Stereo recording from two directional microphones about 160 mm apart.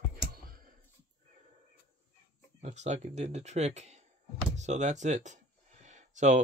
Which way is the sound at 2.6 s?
45° right (ahead or behind).